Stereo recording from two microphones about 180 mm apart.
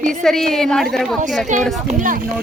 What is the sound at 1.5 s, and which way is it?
Speech, 45° right (ahead or behind).